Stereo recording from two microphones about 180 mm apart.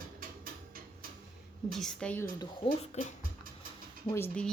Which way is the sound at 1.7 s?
5° left (ahead or behind).